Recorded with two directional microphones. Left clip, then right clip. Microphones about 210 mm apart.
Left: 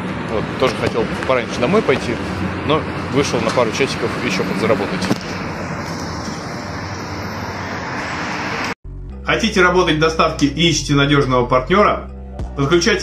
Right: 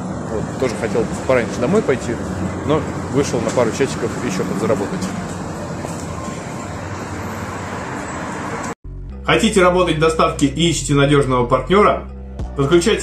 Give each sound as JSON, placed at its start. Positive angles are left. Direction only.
{"t": 1.3, "sound": "speech", "side_deg": -10}
{"t": 9.3, "sound": "speech", "side_deg": 0}